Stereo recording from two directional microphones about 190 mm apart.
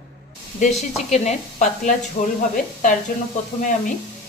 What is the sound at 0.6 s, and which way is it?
Speech, 35° left (ahead or behind).